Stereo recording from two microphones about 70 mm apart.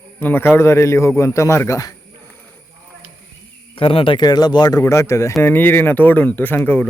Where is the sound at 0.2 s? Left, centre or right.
Left.